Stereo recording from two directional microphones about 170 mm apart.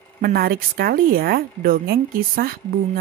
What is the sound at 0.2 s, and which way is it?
A woman's voice, 60° right (ahead or behind).